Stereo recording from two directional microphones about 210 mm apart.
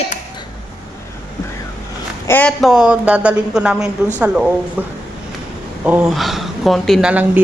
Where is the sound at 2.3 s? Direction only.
5° left (ahead or behind).